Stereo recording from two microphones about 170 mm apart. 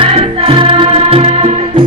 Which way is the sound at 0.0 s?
35° right (ahead or behind).